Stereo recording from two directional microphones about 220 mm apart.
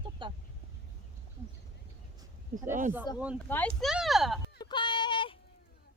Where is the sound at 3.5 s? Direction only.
5° left (ahead or behind).